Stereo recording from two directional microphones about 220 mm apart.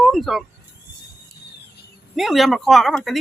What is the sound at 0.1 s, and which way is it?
Speech, centre (ahead or behind).